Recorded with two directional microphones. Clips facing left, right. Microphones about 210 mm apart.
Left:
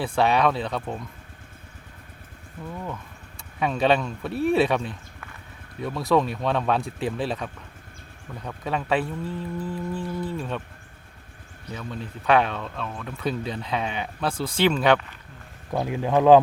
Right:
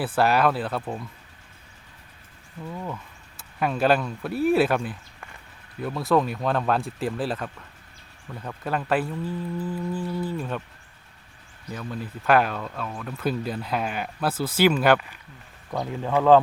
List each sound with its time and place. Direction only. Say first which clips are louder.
0.0 s speech: even; 5° right (ahead or behind)
2.7 s speech: right 1 dB; 5° right (ahead or behind)
11.7 s speech: right 1 dB; 5° right (ahead or behind)
15.7 s speech: left 2 dB; 15° left (ahead or behind)